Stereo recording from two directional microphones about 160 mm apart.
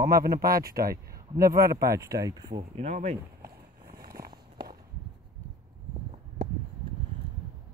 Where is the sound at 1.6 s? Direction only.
20° right (ahead or behind).